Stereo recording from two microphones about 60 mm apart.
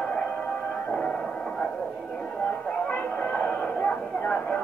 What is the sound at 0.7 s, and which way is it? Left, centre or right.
Music, centre.